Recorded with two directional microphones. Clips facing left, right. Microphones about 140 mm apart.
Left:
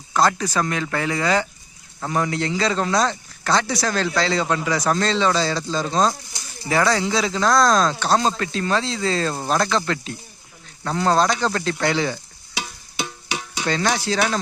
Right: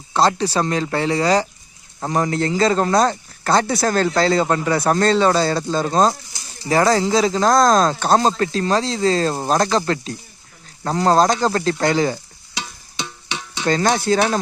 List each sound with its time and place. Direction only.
0.1 s speech: 30° right (ahead or behind)
13.7 s speech: 40° right (ahead or behind)